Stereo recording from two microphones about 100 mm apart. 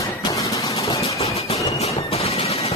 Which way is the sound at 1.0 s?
90° left.